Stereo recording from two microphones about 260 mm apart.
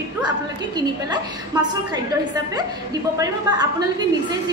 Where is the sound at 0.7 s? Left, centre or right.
Centre.